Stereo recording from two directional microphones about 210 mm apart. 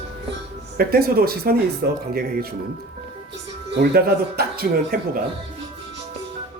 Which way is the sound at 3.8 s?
50° right (ahead or behind).